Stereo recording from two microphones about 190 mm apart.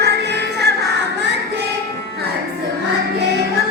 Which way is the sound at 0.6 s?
60° right (ahead or behind).